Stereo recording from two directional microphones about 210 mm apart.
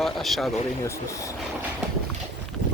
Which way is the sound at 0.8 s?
15° left (ahead or behind).